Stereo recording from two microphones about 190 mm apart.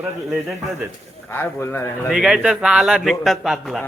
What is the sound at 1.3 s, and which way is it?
Speech, 15° left (ahead or behind).